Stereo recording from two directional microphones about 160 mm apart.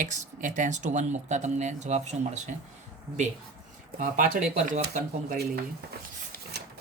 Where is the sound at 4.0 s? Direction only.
55° right (ahead or behind).